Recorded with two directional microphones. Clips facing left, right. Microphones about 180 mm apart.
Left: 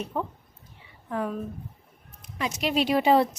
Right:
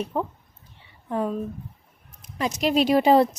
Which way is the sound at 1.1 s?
25° right (ahead or behind).